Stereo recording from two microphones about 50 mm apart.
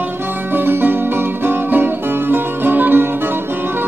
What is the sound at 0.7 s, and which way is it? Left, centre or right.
Music, right.